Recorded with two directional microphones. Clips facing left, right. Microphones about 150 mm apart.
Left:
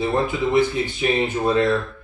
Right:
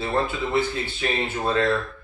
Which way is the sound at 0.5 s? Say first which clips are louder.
Left 5 dB; 15° left (ahead or behind).